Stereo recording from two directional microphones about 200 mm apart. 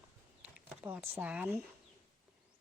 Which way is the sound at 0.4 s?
5° right (ahead or behind).